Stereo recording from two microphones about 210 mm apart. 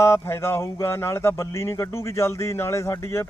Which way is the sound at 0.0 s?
15° left (ahead or behind).